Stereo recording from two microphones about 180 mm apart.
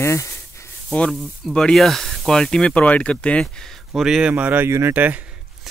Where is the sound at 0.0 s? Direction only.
15° left (ahead or behind).